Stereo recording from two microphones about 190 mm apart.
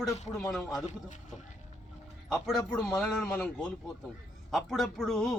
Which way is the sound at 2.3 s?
Centre (ahead or behind).